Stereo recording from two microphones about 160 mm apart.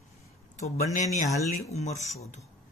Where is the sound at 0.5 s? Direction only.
50° left (ahead or behind).